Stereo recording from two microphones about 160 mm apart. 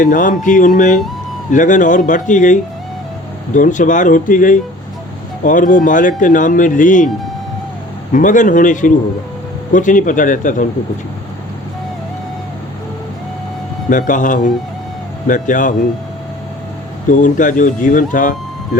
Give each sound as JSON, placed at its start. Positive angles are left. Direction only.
{"t": 0.0, "sound": "speech", "side_deg": 55}
{"t": 8.1, "sound": "speech", "side_deg": 55}
{"t": 14.1, "sound": "speech", "side_deg": 55}
{"t": 17.1, "sound": "speech", "side_deg": 55}